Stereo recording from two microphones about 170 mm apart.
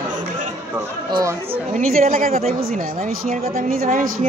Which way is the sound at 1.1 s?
20° right (ahead or behind).